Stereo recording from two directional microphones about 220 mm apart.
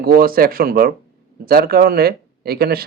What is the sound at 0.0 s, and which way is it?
Speech, 45° right (ahead or behind).